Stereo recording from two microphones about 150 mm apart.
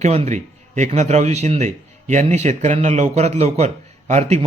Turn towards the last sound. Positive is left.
turn(degrees=-45)  # may be behind; listen again after turning